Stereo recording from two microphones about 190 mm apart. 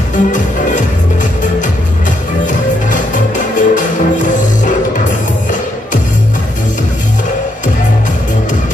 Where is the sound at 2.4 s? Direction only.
40° left (ahead or behind).